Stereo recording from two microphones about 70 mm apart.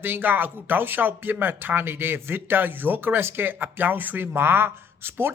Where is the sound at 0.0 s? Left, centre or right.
Right.